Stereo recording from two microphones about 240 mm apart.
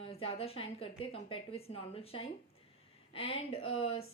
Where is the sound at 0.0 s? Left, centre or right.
Left.